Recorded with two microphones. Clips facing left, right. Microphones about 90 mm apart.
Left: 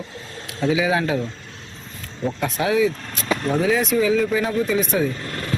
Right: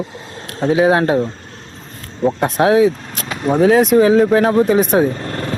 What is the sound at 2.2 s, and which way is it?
Speech, 40° right (ahead or behind).